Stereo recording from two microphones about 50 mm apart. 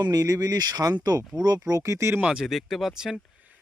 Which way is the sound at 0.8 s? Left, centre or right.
Right.